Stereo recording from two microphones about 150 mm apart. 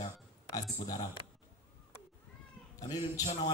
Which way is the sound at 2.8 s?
25° left (ahead or behind).